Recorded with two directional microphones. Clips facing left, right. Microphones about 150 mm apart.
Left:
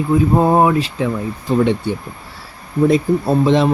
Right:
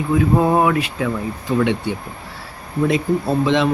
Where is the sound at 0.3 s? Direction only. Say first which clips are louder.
Left 3 dB; 30° left (ahead or behind).